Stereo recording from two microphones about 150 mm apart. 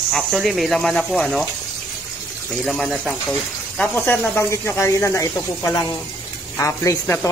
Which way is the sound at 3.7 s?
15° left (ahead or behind).